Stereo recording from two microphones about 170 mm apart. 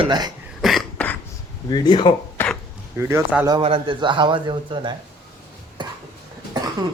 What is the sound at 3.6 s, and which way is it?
Speech, 35° right (ahead or behind).